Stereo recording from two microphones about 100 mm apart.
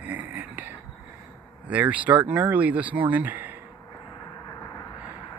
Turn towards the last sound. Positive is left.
turn(degrees=-20)  # may be behind; listen again after turning